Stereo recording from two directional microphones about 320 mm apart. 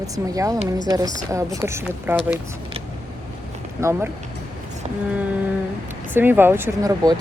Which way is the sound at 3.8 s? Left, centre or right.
Centre.